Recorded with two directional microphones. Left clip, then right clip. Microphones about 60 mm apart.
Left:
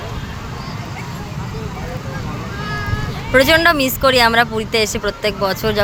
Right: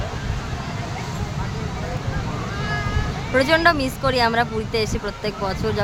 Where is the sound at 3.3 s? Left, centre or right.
Left.